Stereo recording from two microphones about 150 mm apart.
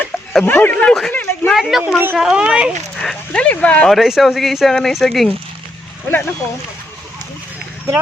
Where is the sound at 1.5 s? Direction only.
Centre (ahead or behind).